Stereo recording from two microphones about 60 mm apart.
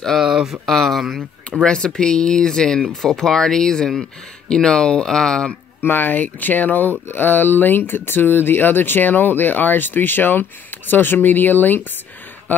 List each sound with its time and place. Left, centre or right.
0.2 s a sound: centre
0.7 s speech: centre
1.6 s speech: centre
5.8 s speech: left